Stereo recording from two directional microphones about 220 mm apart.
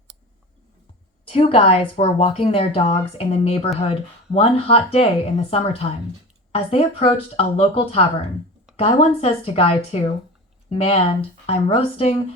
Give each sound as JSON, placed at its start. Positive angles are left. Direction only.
{"t": 1.3, "sound": "a woman's voice", "side_deg": 25}